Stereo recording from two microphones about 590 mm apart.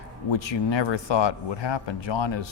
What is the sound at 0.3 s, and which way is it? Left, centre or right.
Speech, left.